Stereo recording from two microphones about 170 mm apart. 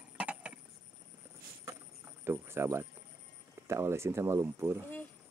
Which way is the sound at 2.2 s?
15° right (ahead or behind).